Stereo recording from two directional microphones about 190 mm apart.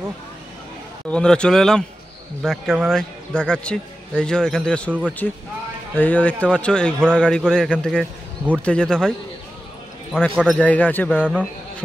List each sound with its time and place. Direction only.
1.1 s a man's voice: 5° left (ahead or behind)
10.1 s speech: centre (ahead or behind)